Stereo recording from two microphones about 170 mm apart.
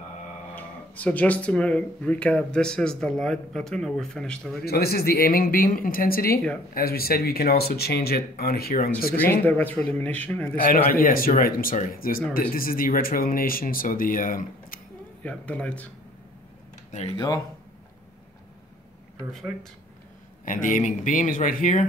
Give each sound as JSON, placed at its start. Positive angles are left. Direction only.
{"t": 0.6, "sound": "speech", "side_deg": 10}
{"t": 4.6, "sound": "speech", "side_deg": 65}
{"t": 9.1, "sound": "speech", "side_deg": 10}
{"t": 10.6, "sound": "speech", "side_deg": 55}
{"t": 15.2, "sound": "speech", "side_deg": 5}
{"t": 20.4, "sound": "speech", "side_deg": 50}